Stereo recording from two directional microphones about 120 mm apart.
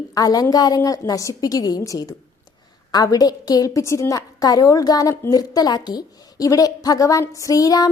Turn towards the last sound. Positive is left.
turn(degrees=30)  # may be behind; listen again after turning